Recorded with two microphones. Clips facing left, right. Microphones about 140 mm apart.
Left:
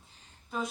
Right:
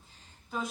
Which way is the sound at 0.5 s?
Centre (ahead or behind).